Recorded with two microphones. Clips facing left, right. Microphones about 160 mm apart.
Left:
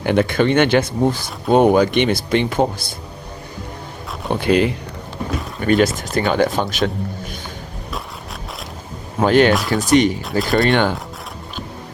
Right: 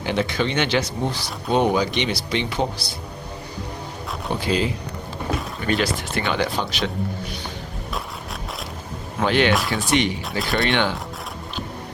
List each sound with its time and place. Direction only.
0.0 s speech: 55° left (ahead or behind)
4.4 s speech: 60° left (ahead or behind)
5.6 s speech: 45° left (ahead or behind)
9.2 s speech: 45° left (ahead or behind)
10.4 s speech: centre (ahead or behind)
10.7 s speech: 45° left (ahead or behind)